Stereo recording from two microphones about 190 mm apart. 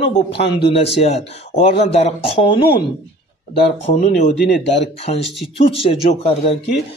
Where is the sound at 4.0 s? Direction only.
40° left (ahead or behind).